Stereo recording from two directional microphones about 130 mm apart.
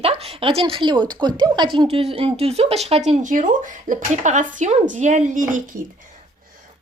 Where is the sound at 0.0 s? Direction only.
50° right (ahead or behind).